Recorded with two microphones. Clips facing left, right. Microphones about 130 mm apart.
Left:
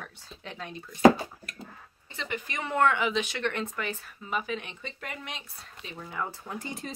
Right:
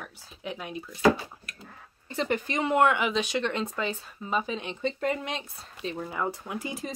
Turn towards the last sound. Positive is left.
turn(degrees=-5)  # may be behind; listen again after turning